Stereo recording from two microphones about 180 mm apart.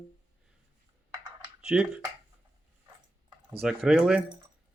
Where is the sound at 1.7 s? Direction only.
5° right (ahead or behind).